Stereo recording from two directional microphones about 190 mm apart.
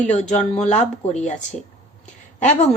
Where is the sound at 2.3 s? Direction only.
40° left (ahead or behind).